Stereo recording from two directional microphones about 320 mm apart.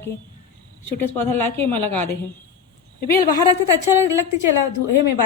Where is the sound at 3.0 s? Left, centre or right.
Left.